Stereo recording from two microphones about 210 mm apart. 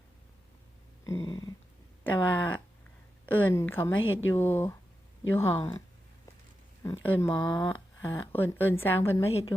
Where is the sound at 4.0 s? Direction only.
70° left (ahead or behind).